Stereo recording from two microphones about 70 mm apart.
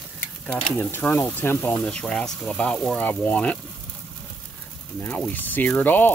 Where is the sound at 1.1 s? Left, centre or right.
Left.